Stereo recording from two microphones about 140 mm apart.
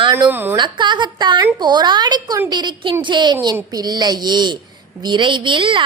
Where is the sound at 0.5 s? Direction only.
35° right (ahead or behind).